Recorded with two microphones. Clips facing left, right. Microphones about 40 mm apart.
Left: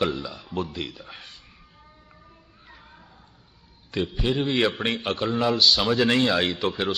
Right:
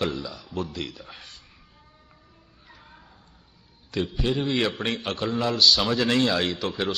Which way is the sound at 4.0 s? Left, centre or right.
Centre.